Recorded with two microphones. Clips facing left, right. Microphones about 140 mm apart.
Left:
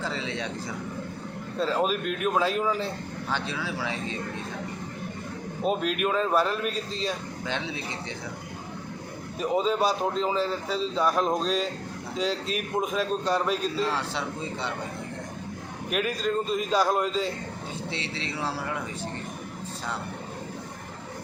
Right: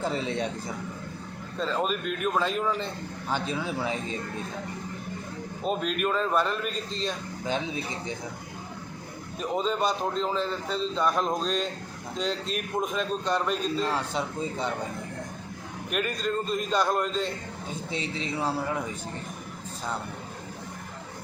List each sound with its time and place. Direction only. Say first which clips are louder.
0.2 s speech: right 3 dB; 50° right (ahead or behind)
1.5 s a man's voice: left 2 dB; 5° left (ahead or behind)
3.3 s speech: right 3 dB; 45° right (ahead or behind)
3.6 s speech: right 2 dB; 25° right (ahead or behind)
5.6 s a man's voice: left 2 dB; 5° left (ahead or behind)
9.4 s a man's voice: left 3 dB; 5° left (ahead or behind)
15.9 s a man's voice: left 2 dB; centre (ahead or behind)